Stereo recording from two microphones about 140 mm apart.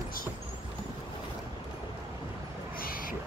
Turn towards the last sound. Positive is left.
turn(degrees=90)